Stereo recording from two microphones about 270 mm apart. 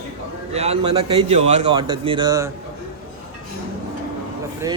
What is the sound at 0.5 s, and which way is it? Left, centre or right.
Speech, right.